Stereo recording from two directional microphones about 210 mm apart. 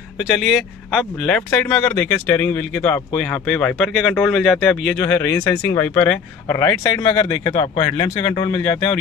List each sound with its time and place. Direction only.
0.3 s speech: centre (ahead or behind); by 8.5 s 20° left (ahead or behind)